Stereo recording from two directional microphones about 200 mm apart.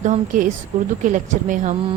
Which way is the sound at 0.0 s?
40° right (ahead or behind).